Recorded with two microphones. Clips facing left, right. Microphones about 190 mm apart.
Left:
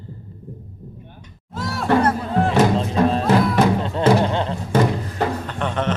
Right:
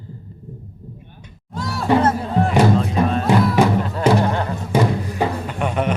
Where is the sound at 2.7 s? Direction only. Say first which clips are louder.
Even; 30° left (ahead or behind).